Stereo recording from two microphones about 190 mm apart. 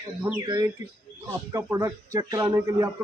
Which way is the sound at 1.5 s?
15° right (ahead or behind).